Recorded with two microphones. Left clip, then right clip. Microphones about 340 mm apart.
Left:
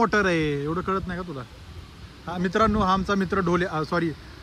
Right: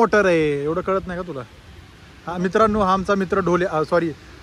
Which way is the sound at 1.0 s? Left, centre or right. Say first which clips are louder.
Right 5 dB; right.